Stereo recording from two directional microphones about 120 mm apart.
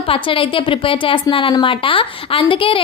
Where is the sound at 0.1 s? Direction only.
45° left (ahead or behind).